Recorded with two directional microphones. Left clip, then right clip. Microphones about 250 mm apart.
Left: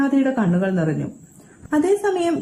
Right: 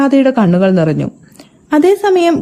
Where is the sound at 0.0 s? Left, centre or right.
Right.